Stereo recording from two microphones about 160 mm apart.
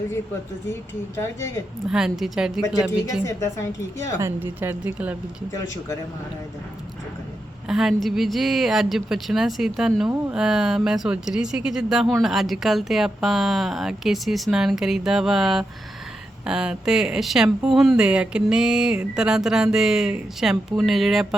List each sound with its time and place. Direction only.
0.7 s speech: 15° left (ahead or behind)
1.9 s speech: 5° right (ahead or behind)
3.2 s a woman's voice: 20° left (ahead or behind)
4.2 s a woman's voice: 15° right (ahead or behind)
5.5 s a woman's voice: 20° left (ahead or behind)
7.7 s speech: 5° right (ahead or behind)